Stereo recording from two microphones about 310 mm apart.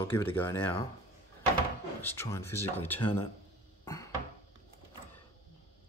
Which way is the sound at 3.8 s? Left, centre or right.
Centre.